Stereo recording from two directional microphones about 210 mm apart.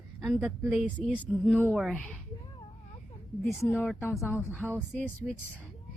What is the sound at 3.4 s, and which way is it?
Speech, 15° left (ahead or behind).